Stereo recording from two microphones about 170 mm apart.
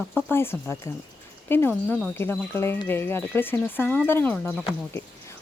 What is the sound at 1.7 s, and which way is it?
Speech, centre (ahead or behind).